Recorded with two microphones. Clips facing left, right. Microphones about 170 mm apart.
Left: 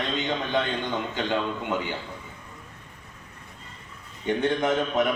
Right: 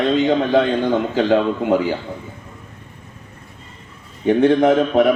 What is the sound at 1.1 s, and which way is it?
Speech, 50° right (ahead or behind).